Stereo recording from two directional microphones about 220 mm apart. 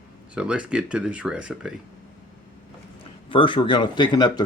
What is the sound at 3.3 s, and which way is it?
Speech, 20° left (ahead or behind).